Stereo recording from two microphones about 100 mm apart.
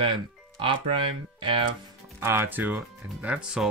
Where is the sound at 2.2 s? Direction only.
25° right (ahead or behind).